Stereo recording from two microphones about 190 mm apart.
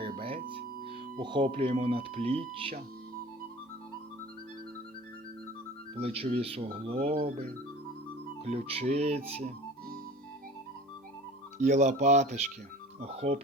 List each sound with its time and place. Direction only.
0.2 s music: 30° right (ahead or behind)
1.2 s speech: 25° right (ahead or behind)
6.0 s speech: 30° right (ahead or behind)
8.4 s speech: 30° right (ahead or behind)
11.5 s speech: 40° right (ahead or behind)